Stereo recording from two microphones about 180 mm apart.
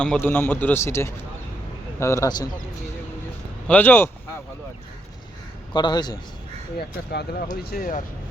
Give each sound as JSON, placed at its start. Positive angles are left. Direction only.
{"t": 0.0, "sound": "a man's voice", "side_deg": 10}
{"t": 3.7, "sound": "a man's voice", "side_deg": 10}
{"t": 5.7, "sound": "a man's voice", "side_deg": 25}
{"t": 6.7, "sound": "speech", "side_deg": 65}
{"t": 7.5, "sound": "speech", "side_deg": 55}